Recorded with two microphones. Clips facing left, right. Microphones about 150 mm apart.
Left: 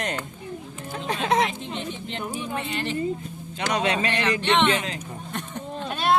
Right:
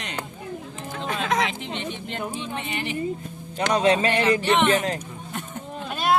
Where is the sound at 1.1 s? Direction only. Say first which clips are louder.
Left 2 dB; 30° left (ahead or behind).